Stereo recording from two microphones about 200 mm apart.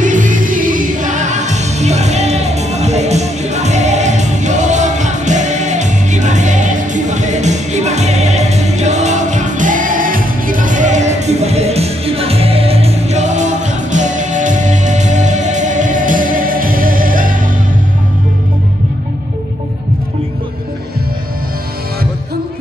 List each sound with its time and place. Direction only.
0.0 s music: 40° right (ahead or behind)